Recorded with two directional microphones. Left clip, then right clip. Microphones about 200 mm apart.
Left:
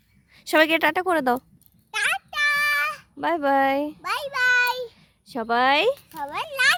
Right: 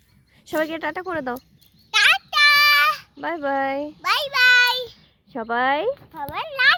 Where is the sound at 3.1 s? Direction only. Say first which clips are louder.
Left 3 dB; 25° left (ahead or behind).